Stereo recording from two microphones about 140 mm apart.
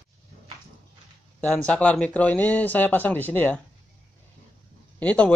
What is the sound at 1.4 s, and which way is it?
Speech, 10° left (ahead or behind).